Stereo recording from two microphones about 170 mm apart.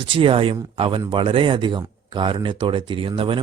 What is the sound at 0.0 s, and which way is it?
Speech, 30° right (ahead or behind).